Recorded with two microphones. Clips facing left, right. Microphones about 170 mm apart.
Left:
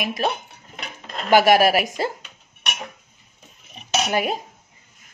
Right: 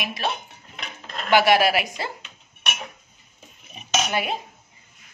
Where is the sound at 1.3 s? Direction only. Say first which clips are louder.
Left 3 dB; 45° left (ahead or behind).